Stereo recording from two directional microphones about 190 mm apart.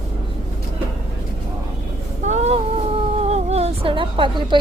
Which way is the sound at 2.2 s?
35° right (ahead or behind).